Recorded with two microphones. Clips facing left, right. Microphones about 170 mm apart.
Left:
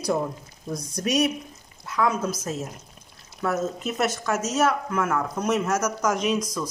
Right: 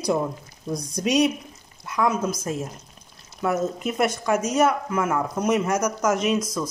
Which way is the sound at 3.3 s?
10° right (ahead or behind).